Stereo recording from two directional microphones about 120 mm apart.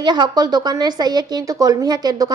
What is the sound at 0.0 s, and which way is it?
Speech, 35° right (ahead or behind).